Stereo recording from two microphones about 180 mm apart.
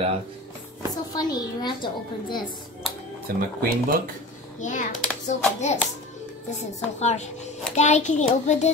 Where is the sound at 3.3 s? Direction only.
55° right (ahead or behind).